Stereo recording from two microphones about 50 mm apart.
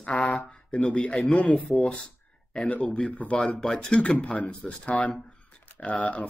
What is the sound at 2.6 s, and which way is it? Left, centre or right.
Speech, left.